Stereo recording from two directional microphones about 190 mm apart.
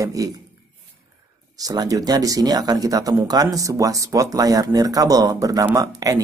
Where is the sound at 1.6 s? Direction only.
20° right (ahead or behind).